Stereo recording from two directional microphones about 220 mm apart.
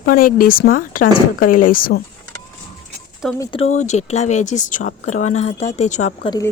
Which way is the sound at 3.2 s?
Centre (ahead or behind).